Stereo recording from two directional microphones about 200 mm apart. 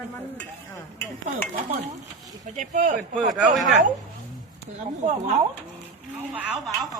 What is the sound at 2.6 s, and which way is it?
Speech, 40° right (ahead or behind).